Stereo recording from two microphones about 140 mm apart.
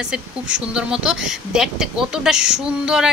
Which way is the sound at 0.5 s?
5° right (ahead or behind).